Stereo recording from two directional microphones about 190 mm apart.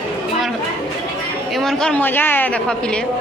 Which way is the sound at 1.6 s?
Centre (ahead or behind).